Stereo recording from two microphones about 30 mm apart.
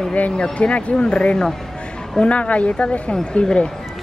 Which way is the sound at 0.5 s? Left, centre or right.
Left.